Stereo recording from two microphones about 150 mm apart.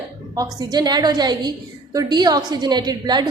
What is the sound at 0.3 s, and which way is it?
A woman's voice, 25° right (ahead or behind).